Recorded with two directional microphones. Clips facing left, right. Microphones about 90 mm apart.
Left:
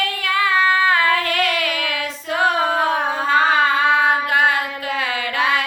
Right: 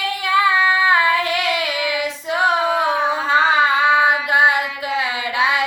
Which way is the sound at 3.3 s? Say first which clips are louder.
Even; 20° right (ahead or behind).